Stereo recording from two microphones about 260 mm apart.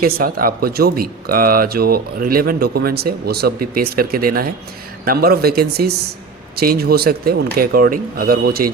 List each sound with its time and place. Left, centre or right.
0.0 s speech: right